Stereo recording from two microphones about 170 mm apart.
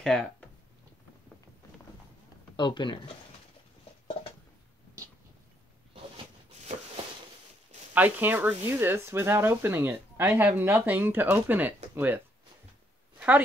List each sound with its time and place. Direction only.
0.0 s a sound: 5° left (ahead or behind)
2.5 s speech: 25° left (ahead or behind)
7.9 s speech: 10° right (ahead or behind)